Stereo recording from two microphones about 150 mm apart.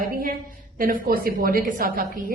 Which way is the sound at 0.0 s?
75° right (ahead or behind).